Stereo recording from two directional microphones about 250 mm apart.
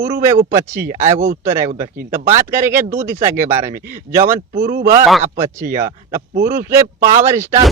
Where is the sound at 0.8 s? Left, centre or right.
Right.